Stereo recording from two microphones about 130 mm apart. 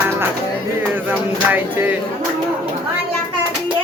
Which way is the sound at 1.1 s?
15° right (ahead or behind).